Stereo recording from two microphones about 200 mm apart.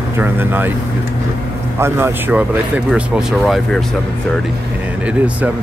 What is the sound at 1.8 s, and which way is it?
Speech, 10° right (ahead or behind).